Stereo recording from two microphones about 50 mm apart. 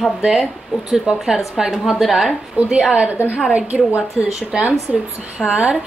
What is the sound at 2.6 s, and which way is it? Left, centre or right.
Speech, right.